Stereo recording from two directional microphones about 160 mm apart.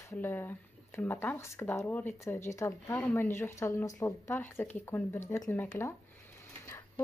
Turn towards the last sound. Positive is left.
turn(degrees=15)  # may be behind; listen again after turning